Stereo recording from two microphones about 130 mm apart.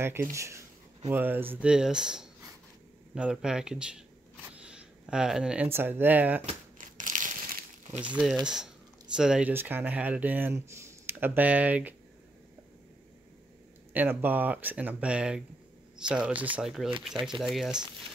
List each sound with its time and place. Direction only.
0.0 s speech: 20° right (ahead or behind)
4.6 s a sound: 5° right (ahead or behind)
5.7 s speech: 15° right (ahead or behind)
6.8 s crumpling: 90° right
8.0 s speech: 5° right (ahead or behind)
13.9 s speech: 15° right (ahead or behind)